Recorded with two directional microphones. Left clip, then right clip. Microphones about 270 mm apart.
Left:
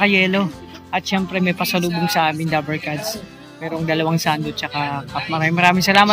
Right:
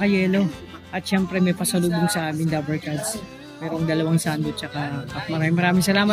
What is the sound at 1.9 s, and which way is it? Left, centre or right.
Speech, right.